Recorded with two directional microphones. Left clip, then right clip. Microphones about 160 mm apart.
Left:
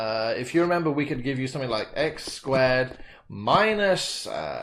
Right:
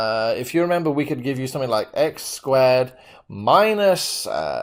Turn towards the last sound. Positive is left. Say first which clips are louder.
# right 7 dB
turn(degrees=-50)  # may be behind; listen again after turning